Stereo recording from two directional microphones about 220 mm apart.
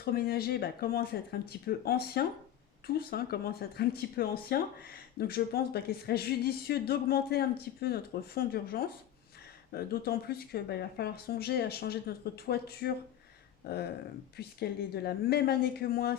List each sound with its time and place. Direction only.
0.0 s speech: 45° left (ahead or behind)